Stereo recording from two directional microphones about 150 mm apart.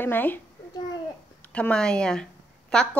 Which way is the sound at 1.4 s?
10° left (ahead or behind).